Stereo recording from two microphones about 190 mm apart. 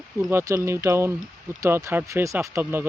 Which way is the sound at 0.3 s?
15° right (ahead or behind).